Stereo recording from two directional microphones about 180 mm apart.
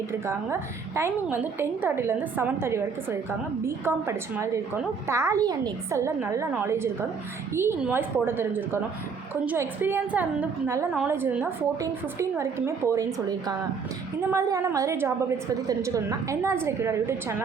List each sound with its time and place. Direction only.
0.1 s a woman's voice: 15° right (ahead or behind)